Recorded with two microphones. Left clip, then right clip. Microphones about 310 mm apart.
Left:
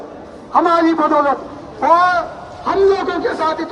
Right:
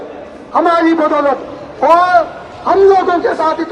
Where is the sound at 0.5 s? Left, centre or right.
Centre.